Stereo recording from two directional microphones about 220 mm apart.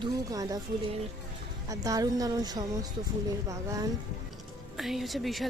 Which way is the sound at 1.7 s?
15° right (ahead or behind).